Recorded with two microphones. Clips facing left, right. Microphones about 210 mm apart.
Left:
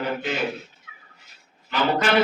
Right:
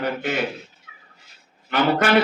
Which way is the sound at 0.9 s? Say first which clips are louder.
Even; 30° right (ahead or behind).